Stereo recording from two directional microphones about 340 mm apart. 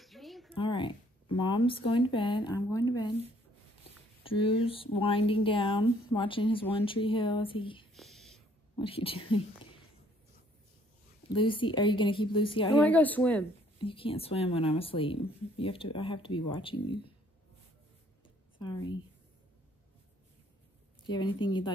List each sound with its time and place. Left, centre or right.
0.0 s a sound: centre
0.6 s speech: centre
4.2 s speech: centre
7.9 s whispering: centre
8.7 s speech: centre
11.3 s speech: centre
13.7 s speech: centre
18.6 s speech: centre
21.0 s a sound: centre
21.4 s speech: centre